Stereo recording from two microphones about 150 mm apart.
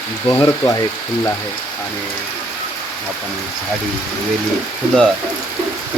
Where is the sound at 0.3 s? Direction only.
15° left (ahead or behind).